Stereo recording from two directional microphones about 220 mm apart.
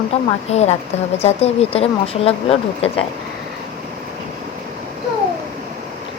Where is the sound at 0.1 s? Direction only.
25° left (ahead or behind).